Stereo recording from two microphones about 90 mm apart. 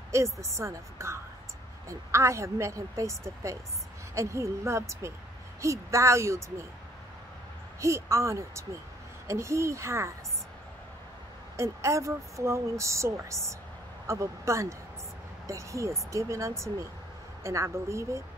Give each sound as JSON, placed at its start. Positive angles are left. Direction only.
{"t": 0.1, "sound": "speech", "side_deg": -30}
{"t": 7.8, "sound": "speech", "side_deg": -35}
{"t": 11.5, "sound": "speech", "side_deg": -35}